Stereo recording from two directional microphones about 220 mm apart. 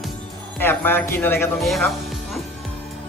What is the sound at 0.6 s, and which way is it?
Speech, 10° left (ahead or behind).